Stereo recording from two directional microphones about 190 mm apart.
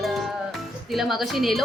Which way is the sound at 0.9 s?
Centre (ahead or behind).